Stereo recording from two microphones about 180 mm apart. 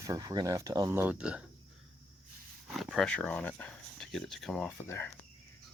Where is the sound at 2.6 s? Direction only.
Centre (ahead or behind).